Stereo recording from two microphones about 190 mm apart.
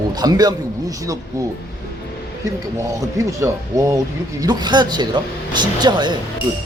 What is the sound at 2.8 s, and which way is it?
Speech, 15° right (ahead or behind).